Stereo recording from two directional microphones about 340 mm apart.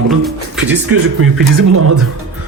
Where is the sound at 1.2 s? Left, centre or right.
Right.